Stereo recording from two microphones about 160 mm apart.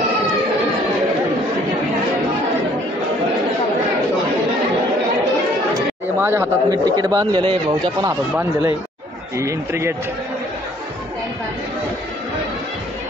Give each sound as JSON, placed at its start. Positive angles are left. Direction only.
{"t": 6.1, "sound": "speech", "side_deg": -15}
{"t": 9.4, "sound": "speech", "side_deg": -20}